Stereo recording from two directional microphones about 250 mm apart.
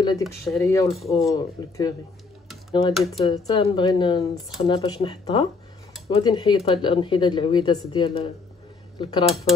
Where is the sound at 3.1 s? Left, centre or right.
Centre.